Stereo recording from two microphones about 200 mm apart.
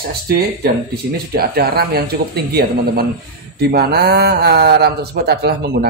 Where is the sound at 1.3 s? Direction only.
50° right (ahead or behind).